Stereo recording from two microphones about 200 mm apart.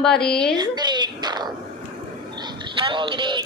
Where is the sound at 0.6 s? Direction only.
20° right (ahead or behind).